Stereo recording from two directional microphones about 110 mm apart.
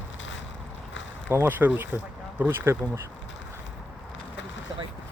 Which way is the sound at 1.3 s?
20° right (ahead or behind).